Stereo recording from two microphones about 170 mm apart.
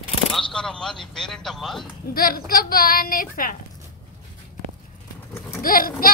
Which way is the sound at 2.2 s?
60° left (ahead or behind).